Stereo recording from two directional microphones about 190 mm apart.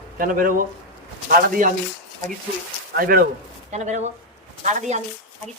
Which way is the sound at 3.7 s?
40° right (ahead or behind).